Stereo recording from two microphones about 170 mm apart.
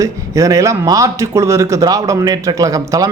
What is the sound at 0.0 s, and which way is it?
Speech, 20° right (ahead or behind).